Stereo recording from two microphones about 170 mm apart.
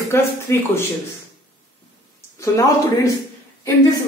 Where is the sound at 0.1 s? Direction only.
15° left (ahead or behind).